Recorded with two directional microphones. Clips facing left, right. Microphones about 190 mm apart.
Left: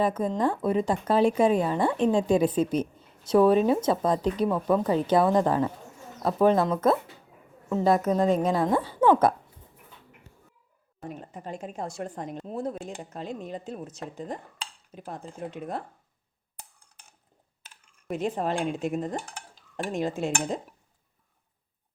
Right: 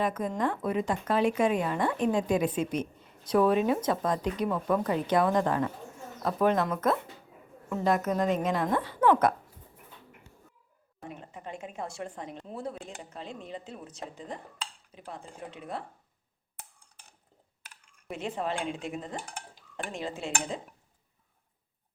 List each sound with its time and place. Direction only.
0.0 s speech: 30° left (ahead or behind)
11.1 s speech: 40° left (ahead or behind)
18.1 s speech: 45° left (ahead or behind)